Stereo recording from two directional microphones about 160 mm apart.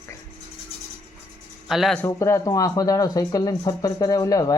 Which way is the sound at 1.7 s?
Centre (ahead or behind).